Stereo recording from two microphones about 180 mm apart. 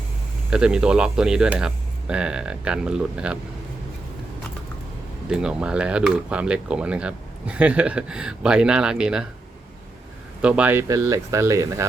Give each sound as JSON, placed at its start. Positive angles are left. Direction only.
{"t": 0.5, "sound": "speech", "side_deg": -5}
{"t": 5.3, "sound": "speech", "side_deg": -5}
{"t": 10.4, "sound": "speech", "side_deg": -10}